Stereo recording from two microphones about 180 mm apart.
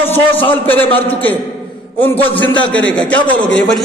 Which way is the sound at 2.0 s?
10° left (ahead or behind).